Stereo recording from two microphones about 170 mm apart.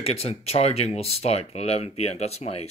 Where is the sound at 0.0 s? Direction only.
35° left (ahead or behind).